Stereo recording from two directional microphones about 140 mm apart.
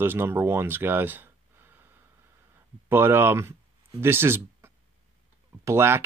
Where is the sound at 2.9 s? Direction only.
15° right (ahead or behind).